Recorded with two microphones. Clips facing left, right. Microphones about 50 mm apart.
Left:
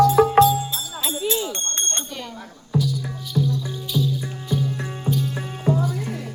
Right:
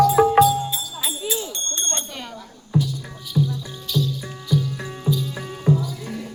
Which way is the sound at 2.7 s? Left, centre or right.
Centre.